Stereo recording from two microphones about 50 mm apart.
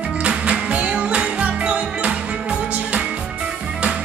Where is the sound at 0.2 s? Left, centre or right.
Right.